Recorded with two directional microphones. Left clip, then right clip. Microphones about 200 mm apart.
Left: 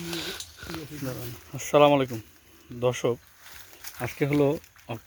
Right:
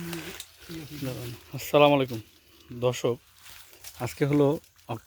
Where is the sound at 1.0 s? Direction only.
15° right (ahead or behind).